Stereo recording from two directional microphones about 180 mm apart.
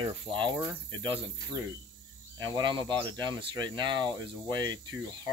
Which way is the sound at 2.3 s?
25° right (ahead or behind).